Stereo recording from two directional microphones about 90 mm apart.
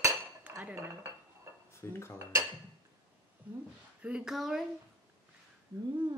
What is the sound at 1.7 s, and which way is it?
Speech, 30° left (ahead or behind).